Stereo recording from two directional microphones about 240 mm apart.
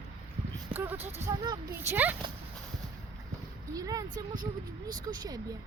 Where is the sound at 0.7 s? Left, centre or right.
Centre.